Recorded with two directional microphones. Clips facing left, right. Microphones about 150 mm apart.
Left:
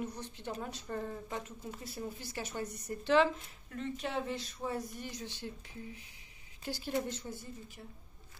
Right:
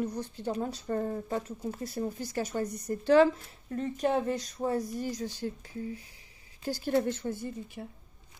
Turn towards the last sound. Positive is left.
turn(degrees=-55)  # may be behind; listen again after turning